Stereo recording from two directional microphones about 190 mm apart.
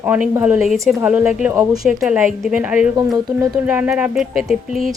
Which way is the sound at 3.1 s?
20° right (ahead or behind).